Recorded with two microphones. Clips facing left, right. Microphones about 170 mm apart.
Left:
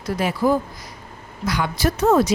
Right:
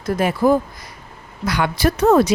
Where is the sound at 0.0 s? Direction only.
50° right (ahead or behind).